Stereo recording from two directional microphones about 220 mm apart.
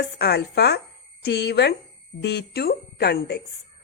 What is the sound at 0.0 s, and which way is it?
A woman's voice, 45° left (ahead or behind).